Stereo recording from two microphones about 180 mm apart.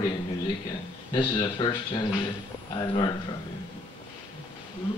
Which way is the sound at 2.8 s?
25° left (ahead or behind).